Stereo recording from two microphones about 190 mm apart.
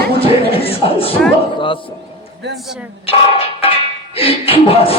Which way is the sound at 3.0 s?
30° left (ahead or behind).